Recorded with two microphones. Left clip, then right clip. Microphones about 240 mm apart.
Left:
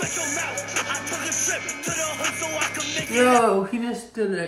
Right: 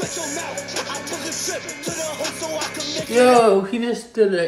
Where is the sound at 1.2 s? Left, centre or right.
Right.